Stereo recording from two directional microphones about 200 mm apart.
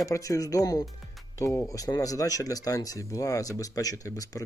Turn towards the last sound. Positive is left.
turn(degrees=15)  # may be behind; listen again after turning